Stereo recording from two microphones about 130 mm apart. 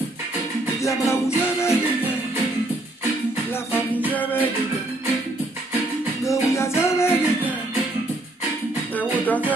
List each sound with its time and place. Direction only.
0.8 s music: 20° left (ahead or behind)
4.1 s music: 15° left (ahead or behind)
6.2 s music: 20° left (ahead or behind)
8.9 s music: 10° left (ahead or behind)